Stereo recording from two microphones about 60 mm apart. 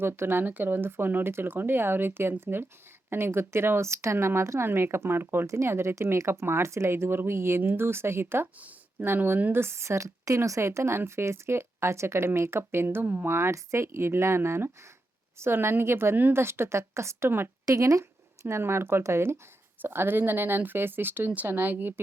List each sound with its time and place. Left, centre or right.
0.0 s speech: right
5.5 s speech: right
8.5 s a sound: right
9.0 s speech: right
17.7 s speech: right
18.0 s speech: right
19.8 s speech: right